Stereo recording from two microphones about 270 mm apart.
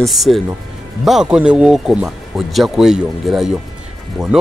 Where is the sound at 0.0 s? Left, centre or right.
Centre.